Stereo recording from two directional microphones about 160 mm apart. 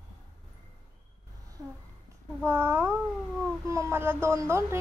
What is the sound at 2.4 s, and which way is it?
Speech, 15° right (ahead or behind).